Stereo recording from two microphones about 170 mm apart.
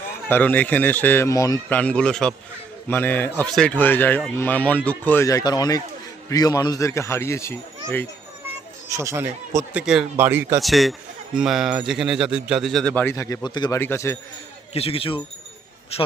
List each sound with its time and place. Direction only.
0.3 s speech: 10° left (ahead or behind)
1.7 s speech: 10° left (ahead or behind)
8.9 s speech: 15° right (ahead or behind)
9.7 s speech: 5° right (ahead or behind)
10.6 s speech: centre (ahead or behind); by 13.7 s 25° left (ahead or behind)
13.7 s speech: 15° left (ahead or behind)
14.7 s speech: 35° left (ahead or behind)